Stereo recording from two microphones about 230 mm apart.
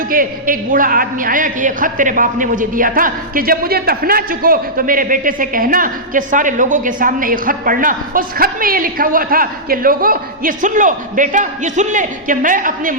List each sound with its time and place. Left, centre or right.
0.1 s a man's voice: right